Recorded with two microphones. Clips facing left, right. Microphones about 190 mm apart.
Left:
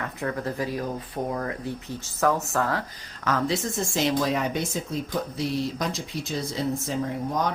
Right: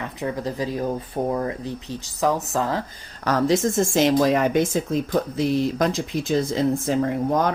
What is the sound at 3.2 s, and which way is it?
Speech, 40° right (ahead or behind).